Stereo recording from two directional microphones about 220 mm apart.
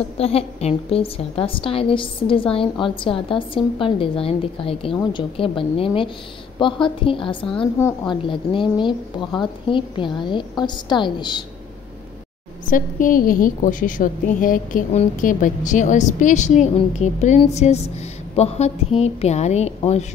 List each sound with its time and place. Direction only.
0.2 s a woman's voice: 25° left (ahead or behind)
12.6 s a woman's voice: 40° left (ahead or behind)